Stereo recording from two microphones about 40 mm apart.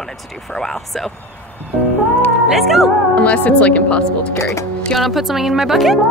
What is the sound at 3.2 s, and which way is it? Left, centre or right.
Speech, left.